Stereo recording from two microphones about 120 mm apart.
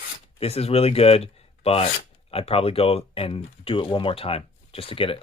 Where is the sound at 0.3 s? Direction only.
55° left (ahead or behind).